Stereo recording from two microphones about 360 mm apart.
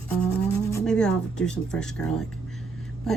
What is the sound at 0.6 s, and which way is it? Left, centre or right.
A woman's voice, centre.